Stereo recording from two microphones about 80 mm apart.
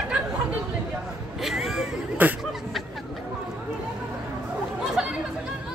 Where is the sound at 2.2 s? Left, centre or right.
Right.